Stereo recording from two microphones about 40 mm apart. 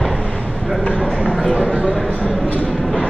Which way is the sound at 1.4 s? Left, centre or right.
Centre.